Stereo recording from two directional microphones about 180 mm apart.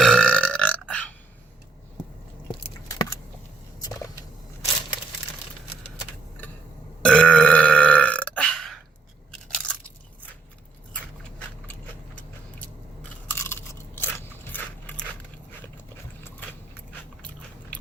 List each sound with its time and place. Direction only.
0.0 s burping: 5° left (ahead or behind)
2.6 s a sound: 20° left (ahead or behind)
7.0 s burping: 5° left (ahead or behind)
9.5 s crunch: 5° left (ahead or behind)
11.7 s biting: 10° left (ahead or behind)
16.2 s biting: 10° left (ahead or behind)